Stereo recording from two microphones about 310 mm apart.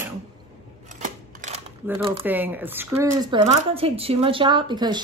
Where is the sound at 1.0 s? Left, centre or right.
Right.